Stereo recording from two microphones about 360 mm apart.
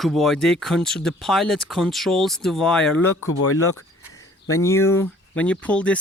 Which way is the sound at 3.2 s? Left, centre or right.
Left.